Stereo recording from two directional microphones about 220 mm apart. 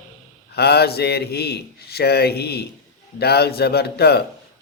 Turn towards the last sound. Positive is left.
turn(degrees=45)  # may be behind; listen again after turning